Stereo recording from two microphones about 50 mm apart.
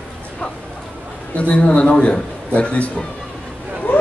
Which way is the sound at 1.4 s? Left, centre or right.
Left.